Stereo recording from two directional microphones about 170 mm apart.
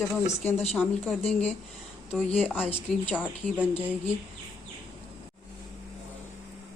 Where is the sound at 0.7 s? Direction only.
10° left (ahead or behind).